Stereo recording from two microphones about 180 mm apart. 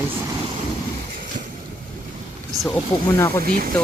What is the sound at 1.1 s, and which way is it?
Vehicle, 50° right (ahead or behind).